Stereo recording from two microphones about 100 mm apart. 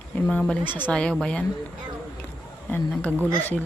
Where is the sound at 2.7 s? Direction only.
15° left (ahead or behind).